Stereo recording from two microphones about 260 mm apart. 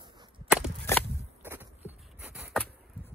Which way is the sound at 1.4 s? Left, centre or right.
Centre.